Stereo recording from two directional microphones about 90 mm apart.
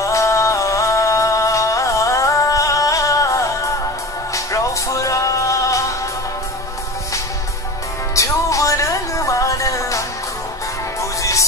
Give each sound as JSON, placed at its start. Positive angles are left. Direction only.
{"t": 0.0, "sound": "music", "side_deg": 35}
{"t": 8.1, "sound": "music", "side_deg": 35}